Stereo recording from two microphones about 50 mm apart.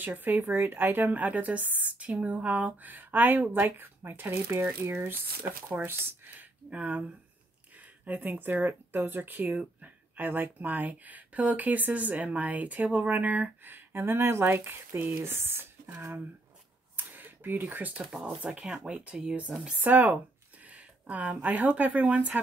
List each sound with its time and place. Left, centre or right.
0.0 s a woman's voice: right
6.7 s speech: right
7.7 s a sound: right
8.6 s a woman's voice: right
15.2 s speech: right
16.9 s a sound: right
18.2 s speech: right
19.8 s a woman's voice: right
20.6 s a sound: right
21.4 s a woman's voice: right